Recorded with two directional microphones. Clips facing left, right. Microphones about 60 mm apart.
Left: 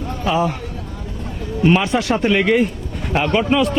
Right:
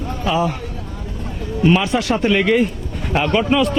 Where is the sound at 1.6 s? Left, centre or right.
Left.